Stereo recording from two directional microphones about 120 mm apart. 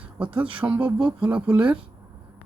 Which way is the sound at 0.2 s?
10° right (ahead or behind).